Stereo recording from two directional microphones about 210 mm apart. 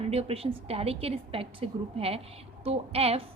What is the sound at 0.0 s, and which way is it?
A woman's voice, 30° right (ahead or behind).